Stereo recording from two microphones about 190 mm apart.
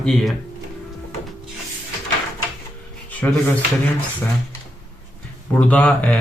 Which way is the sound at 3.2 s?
10° left (ahead or behind).